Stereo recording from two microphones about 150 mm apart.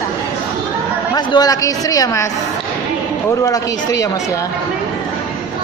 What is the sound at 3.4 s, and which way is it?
Speech, 20° left (ahead or behind).